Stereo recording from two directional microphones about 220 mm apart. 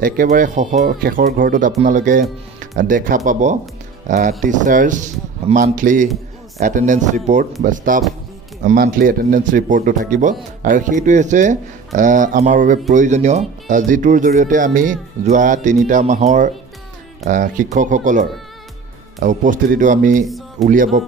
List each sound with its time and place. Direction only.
0.0 s speech: 40° right (ahead or behind)
20.2 s music: centre (ahead or behind)
20.6 s speech: 35° right (ahead or behind)